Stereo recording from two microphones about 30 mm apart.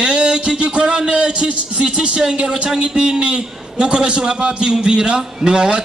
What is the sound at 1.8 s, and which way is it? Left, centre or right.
A man's voice, right.